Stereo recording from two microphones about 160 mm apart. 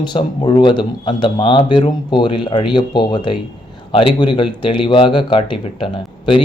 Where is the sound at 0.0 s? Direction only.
30° left (ahead or behind).